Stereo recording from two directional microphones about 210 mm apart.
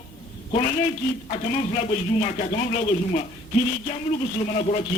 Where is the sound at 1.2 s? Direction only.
30° left (ahead or behind).